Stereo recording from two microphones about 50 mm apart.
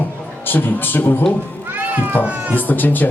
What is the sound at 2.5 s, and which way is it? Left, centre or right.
Speech, left.